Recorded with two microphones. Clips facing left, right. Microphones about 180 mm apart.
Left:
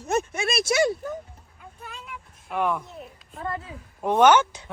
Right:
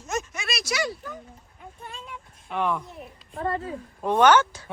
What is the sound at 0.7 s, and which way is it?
Speech, 25° left (ahead or behind).